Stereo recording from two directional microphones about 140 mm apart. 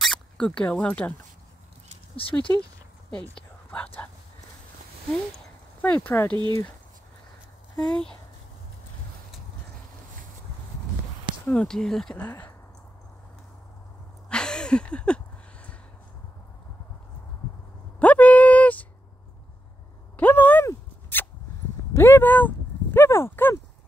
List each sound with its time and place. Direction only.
0.0 s speech: 5° left (ahead or behind)
2.1 s speech: 40° left (ahead or behind)
3.2 s speech: 10° left (ahead or behind)
5.8 s speech: 15° left (ahead or behind)
7.9 s speech: 5° left (ahead or behind)
11.4 s speech: 5° left (ahead or behind)
14.3 s a sound: 5° left (ahead or behind)
17.9 s a sound: 10° left (ahead or behind)
20.2 s a sound: 10° left (ahead or behind)